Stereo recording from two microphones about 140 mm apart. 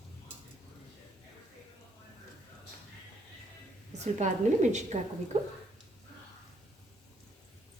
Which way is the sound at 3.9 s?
55° right (ahead or behind).